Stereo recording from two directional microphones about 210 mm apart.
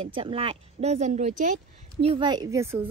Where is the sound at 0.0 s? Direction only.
25° right (ahead or behind).